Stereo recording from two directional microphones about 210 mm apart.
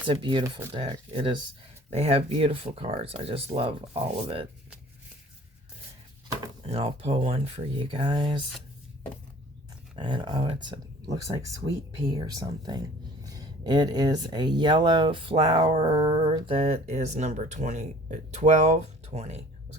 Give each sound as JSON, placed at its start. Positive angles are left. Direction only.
{"t": 0.1, "sound": "speech", "side_deg": -20}
{"t": 6.7, "sound": "speech", "side_deg": -30}
{"t": 9.9, "sound": "speech", "side_deg": -20}